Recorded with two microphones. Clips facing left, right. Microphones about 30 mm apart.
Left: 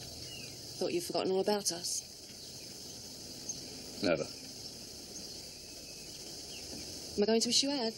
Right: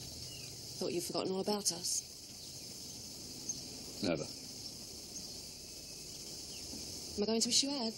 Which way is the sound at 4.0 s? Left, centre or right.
Left.